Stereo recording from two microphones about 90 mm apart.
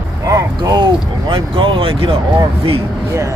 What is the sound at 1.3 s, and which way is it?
Speech, 75° right (ahead or behind).